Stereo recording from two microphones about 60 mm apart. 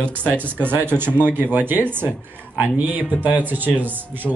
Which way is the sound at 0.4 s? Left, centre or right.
Right.